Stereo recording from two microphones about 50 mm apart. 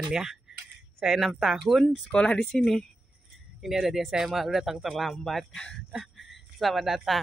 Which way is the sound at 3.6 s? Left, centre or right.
Centre.